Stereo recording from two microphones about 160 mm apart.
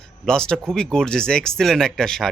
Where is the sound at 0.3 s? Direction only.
5° left (ahead or behind).